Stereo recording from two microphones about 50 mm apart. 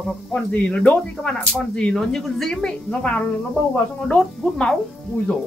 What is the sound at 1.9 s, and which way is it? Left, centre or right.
A woman's voice, centre.